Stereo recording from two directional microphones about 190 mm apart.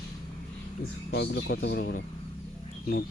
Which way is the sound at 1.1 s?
65° left (ahead or behind).